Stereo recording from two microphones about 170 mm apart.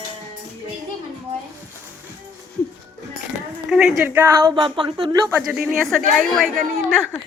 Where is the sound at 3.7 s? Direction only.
5° right (ahead or behind).